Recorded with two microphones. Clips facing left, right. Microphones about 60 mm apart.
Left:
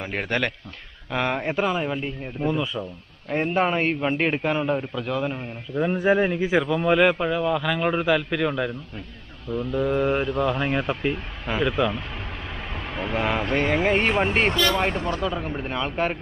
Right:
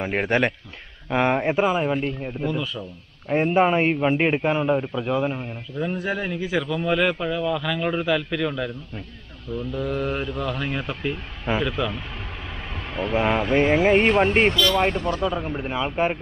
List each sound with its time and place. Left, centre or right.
0.0 s a man's voice: right; by 2.3 s centre
2.4 s a man's voice: centre
3.3 s a man's voice: centre
5.8 s a man's voice: left
13.1 s speech: centre
14.5 s a man's voice: left
15.2 s speech: centre